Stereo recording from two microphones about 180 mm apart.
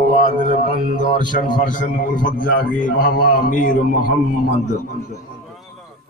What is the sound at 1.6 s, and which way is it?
A man's voice, 45° left (ahead or behind).